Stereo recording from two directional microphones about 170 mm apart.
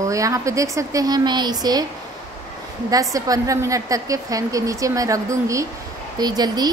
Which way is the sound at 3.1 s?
20° right (ahead or behind).